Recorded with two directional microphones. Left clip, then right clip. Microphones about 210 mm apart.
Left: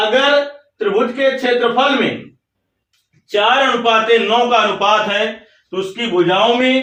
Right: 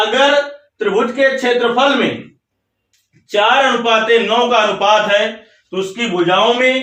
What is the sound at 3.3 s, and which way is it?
A man's voice, centre (ahead or behind).